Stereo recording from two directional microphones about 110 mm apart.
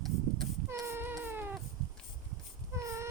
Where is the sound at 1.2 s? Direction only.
20° right (ahead or behind).